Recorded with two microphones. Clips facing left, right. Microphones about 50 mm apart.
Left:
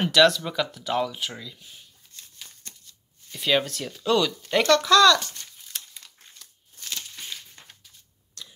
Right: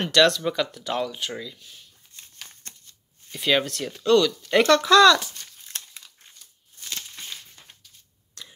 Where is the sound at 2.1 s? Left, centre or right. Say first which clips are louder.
Even; centre.